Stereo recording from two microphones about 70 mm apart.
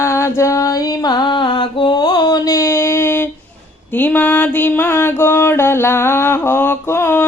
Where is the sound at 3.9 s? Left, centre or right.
Left.